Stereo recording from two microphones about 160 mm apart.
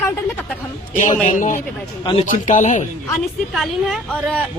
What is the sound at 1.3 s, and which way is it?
Speech, 50° left (ahead or behind).